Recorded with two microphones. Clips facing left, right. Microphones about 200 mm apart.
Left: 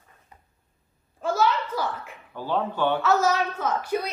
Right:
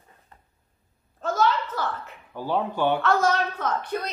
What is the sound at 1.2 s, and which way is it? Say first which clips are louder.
Speech: even; 10° left (ahead or behind).